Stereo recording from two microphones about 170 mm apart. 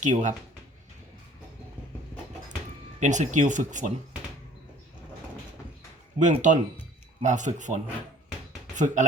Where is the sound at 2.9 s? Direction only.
45° right (ahead or behind).